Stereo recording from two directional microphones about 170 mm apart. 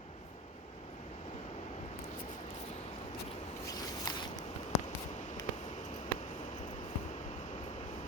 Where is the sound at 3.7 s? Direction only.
25° left (ahead or behind).